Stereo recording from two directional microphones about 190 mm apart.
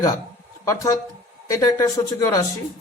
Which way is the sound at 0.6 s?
15° left (ahead or behind).